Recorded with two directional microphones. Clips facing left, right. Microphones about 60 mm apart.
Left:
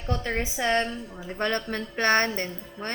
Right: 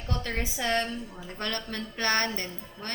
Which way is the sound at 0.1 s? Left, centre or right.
Left.